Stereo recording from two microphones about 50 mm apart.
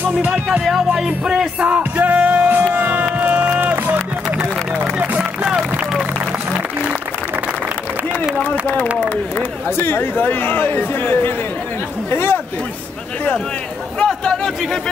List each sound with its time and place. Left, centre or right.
0.3 s music: centre
1.8 s music: right
2.7 s a sound: right
3.7 s music: right
6.5 s applause: right
8.4 s a man's voice: left
9.8 s speech: left
14.0 s speech: centre